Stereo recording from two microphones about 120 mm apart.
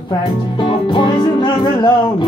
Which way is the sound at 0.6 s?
40° left (ahead or behind).